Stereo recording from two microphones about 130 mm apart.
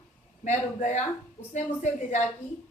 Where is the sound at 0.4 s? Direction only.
70° left (ahead or behind).